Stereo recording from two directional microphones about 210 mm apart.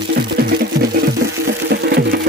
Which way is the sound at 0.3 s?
45° right (ahead or behind).